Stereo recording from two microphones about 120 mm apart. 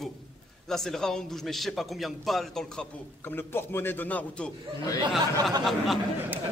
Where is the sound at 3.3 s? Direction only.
20° left (ahead or behind).